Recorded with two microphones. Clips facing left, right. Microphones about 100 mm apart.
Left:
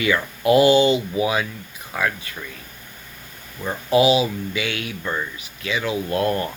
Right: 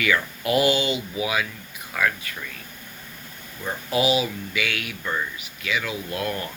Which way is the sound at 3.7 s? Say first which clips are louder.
Left 6 dB; 25° left (ahead or behind).